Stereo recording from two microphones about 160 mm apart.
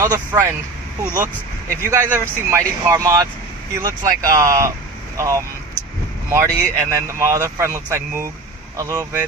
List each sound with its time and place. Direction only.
0.0 s speech: 15° right (ahead or behind)
1.7 s speech: 15° right (ahead or behind)